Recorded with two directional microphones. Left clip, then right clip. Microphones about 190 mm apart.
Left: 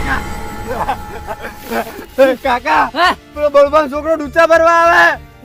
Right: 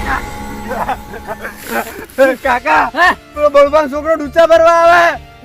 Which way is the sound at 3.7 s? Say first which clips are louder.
Right 1 dB; 35° left (ahead or behind).